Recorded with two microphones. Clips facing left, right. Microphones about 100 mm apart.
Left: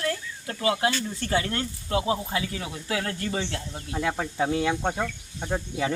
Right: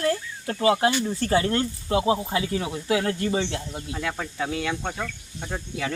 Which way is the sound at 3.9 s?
20° left (ahead or behind).